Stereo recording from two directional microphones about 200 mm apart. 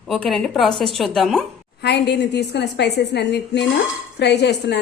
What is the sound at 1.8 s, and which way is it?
A woman's voice, 55° left (ahead or behind).